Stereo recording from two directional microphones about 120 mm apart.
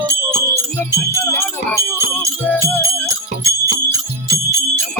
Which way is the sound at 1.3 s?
25° left (ahead or behind).